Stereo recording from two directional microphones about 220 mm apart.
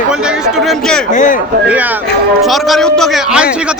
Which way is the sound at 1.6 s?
5° right (ahead or behind).